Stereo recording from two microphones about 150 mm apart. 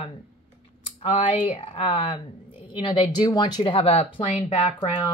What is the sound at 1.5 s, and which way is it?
Speech, 40° left (ahead or behind).